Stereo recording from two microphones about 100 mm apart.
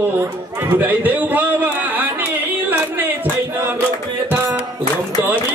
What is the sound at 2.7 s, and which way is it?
Music, 20° right (ahead or behind).